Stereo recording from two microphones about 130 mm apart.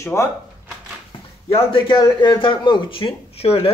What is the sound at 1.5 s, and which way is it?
Speech, 40° left (ahead or behind).